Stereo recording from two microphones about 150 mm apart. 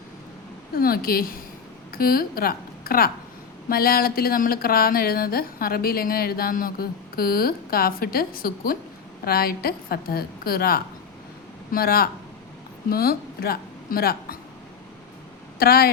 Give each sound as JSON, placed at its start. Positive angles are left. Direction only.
{"t": 0.7, "sound": "a woman's voice", "side_deg": 80}
{"t": 9.2, "sound": "a woman's voice", "side_deg": 90}
{"t": 15.5, "sound": "speech", "side_deg": 90}